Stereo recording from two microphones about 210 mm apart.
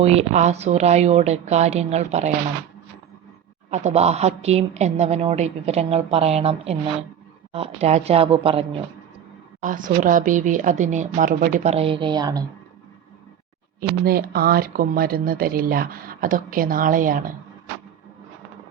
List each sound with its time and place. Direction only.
0.0 s speech: 30° right (ahead or behind)
3.7 s speech: 35° right (ahead or behind)
9.6 s speech: 40° right (ahead or behind); by 12.5 s 20° right (ahead or behind)
14.0 s speech: 45° right (ahead or behind)